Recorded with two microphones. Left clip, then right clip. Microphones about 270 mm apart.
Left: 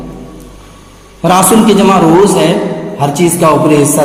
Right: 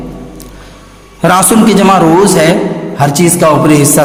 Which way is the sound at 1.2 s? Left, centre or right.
Right.